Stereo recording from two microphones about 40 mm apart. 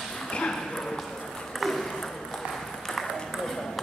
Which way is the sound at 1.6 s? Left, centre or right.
Centre.